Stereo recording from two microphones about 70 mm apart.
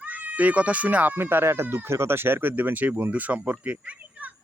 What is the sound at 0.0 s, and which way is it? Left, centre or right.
A man's voice, right.